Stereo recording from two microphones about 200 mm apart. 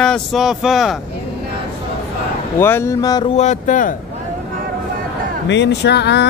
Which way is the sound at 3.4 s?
35° left (ahead or behind).